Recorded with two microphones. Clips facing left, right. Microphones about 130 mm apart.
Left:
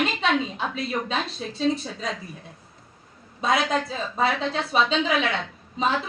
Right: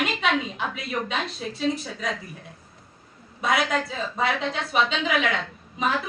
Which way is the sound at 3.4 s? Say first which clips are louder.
Left 1 dB; 25° left (ahead or behind).